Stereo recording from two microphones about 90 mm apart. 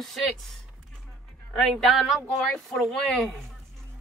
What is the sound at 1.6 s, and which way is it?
Speech, centre (ahead or behind).